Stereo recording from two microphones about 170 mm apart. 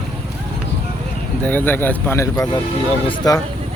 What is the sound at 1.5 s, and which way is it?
Speech, 10° left (ahead or behind).